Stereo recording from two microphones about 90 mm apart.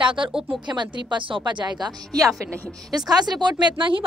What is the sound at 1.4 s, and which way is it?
Speech, 55° right (ahead or behind).